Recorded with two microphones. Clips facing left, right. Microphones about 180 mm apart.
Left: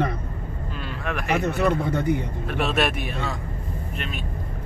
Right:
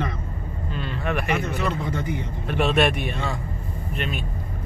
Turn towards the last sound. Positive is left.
turn(degrees=0)  # may be behind; listen again after turning